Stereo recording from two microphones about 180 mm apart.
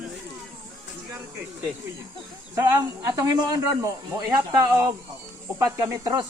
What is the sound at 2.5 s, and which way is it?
Speech, 15° right (ahead or behind).